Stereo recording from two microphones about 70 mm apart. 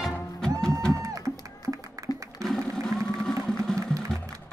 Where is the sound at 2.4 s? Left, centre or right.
Centre.